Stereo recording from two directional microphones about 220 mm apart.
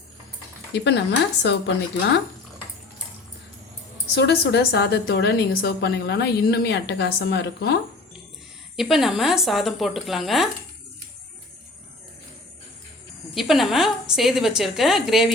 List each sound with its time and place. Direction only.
0.7 s a woman's voice: 50° left (ahead or behind)
4.1 s a woman's voice: 50° left (ahead or behind)
8.7 s a woman's voice: centre (ahead or behind)
13.3 s a woman's voice: centre (ahead or behind)